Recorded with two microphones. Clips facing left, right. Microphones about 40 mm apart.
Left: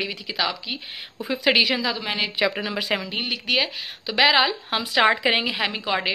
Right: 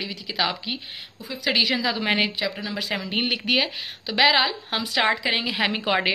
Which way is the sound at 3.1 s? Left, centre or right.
Centre.